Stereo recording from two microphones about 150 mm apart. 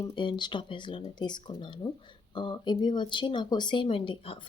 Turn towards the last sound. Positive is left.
turn(degrees=35)  # may be behind; listen again after turning